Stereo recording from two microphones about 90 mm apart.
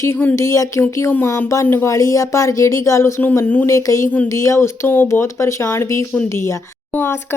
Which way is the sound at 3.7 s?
35° left (ahead or behind).